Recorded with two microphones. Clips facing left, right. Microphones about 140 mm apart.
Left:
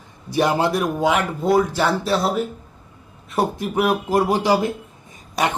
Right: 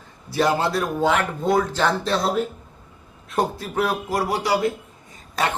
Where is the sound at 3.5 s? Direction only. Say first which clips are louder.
Left 4 dB; 15° left (ahead or behind).